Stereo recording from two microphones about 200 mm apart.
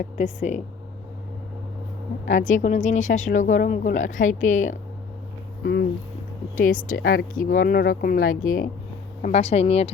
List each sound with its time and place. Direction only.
0.0 s speech: 35° left (ahead or behind)
2.2 s speech: 40° left (ahead or behind)
6.6 s speech: 40° left (ahead or behind)